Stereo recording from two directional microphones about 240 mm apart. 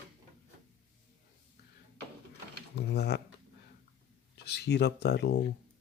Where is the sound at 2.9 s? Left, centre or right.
Left.